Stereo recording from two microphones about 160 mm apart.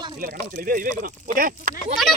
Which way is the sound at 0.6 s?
60° right (ahead or behind).